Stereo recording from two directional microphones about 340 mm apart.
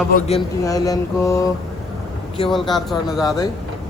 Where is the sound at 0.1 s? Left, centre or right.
Centre.